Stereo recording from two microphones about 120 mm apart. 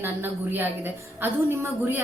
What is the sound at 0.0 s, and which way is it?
A woman's voice, 15° right (ahead or behind).